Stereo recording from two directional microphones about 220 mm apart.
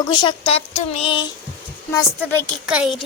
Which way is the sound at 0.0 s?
20° left (ahead or behind).